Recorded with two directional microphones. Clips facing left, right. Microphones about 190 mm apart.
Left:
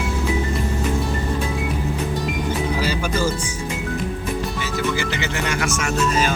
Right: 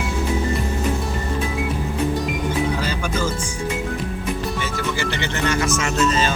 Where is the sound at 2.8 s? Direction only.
10° left (ahead or behind).